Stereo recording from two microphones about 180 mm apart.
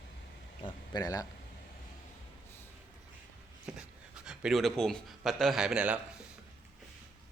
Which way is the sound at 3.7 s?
5° right (ahead or behind).